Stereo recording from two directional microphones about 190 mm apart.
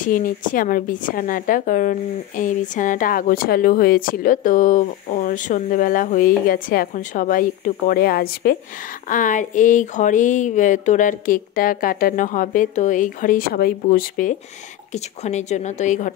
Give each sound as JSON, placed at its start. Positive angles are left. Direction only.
{"t": 0.0, "sound": "a woman's voice", "side_deg": 45}